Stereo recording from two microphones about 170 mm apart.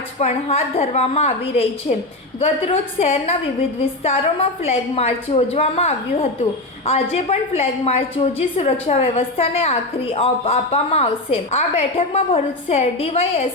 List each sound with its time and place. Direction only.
0.2 s a woman's voice: 40° left (ahead or behind)